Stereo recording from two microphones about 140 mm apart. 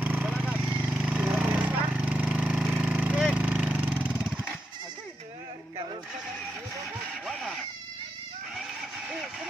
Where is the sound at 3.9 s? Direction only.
15° left (ahead or behind).